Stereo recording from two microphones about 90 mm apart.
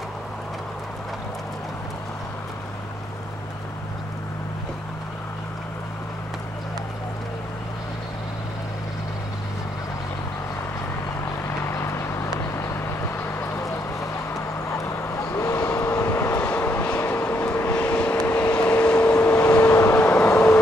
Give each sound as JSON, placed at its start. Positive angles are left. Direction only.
{"t": 11.4, "sound": "vehicle", "side_deg": 30}
{"t": 13.4, "sound": "a sound", "side_deg": 30}
{"t": 14.3, "sound": "vehicle", "side_deg": 30}
{"t": 19.6, "sound": "vehicle", "side_deg": 30}